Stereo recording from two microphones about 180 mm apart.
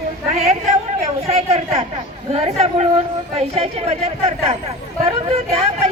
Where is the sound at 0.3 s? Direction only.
35° right (ahead or behind).